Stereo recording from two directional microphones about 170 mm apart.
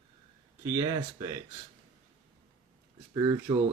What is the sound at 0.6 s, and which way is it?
Speech, 20° right (ahead or behind).